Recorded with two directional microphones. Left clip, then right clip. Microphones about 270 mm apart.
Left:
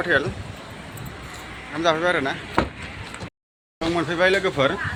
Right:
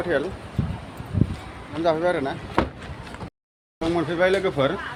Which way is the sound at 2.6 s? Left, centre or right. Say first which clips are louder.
Even; left.